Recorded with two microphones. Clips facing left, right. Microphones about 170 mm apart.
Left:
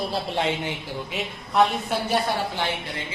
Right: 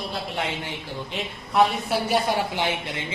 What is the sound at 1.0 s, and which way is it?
Speech, centre (ahead or behind).